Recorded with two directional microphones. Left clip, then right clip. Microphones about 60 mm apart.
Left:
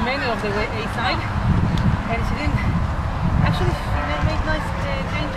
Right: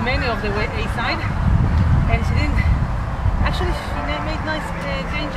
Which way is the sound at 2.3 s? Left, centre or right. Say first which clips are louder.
Even; right.